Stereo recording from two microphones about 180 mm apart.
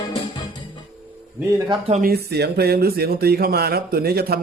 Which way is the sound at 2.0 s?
60° right (ahead or behind).